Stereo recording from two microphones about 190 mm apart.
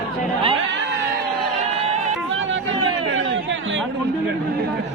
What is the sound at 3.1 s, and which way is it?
Chatter, 80° right.